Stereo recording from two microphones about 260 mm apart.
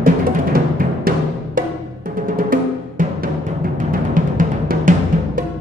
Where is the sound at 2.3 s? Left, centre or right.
Right.